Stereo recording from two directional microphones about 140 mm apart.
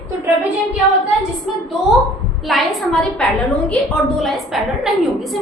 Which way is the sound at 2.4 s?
Centre (ahead or behind).